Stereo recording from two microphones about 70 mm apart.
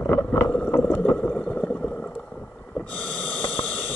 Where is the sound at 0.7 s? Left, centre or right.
Left; by 2.0 s centre.